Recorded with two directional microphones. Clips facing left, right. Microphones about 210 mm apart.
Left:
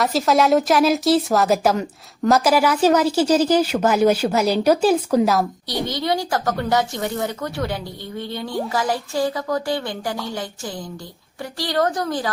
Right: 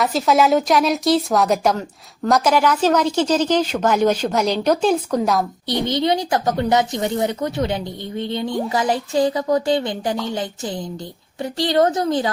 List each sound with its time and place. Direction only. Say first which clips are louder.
0.0 s a woman's voice: right 1 dB; centre (ahead or behind)
5.9 s speech: right 3 dB; 20° right (ahead or behind)